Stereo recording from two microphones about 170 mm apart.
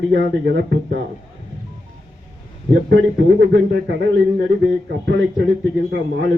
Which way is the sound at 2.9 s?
90° right.